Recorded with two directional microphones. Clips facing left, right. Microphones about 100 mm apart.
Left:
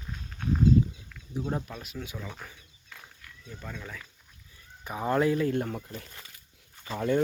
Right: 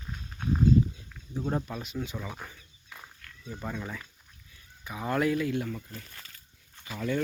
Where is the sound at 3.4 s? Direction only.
15° right (ahead or behind).